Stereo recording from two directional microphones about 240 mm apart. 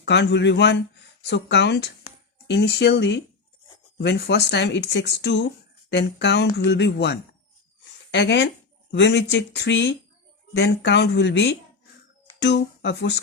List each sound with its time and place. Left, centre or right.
0.0 s speech: left